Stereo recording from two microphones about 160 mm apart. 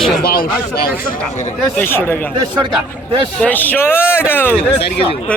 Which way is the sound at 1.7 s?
15° left (ahead or behind).